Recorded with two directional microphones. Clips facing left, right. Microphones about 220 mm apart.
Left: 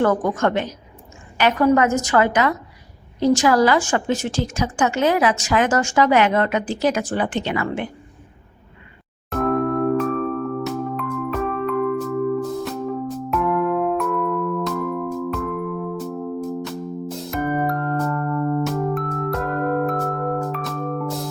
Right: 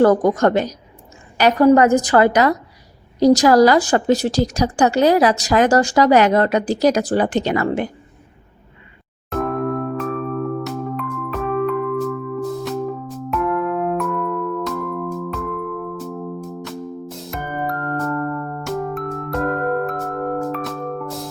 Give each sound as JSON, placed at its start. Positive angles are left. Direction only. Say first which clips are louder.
{"t": 0.0, "sound": "a woman's voice", "louder": "right 5 dB", "side_deg": -40}
{"t": 9.3, "sound": "music", "louder": "left 1 dB", "side_deg": 0}